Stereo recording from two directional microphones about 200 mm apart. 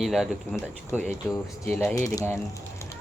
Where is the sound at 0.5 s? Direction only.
10° left (ahead or behind).